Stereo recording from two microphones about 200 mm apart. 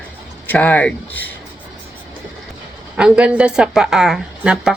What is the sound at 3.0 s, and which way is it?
A woman's voice, 5° right (ahead or behind).